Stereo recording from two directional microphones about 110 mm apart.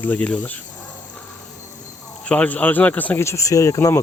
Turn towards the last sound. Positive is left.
turn(degrees=25)  # may be behind; listen again after turning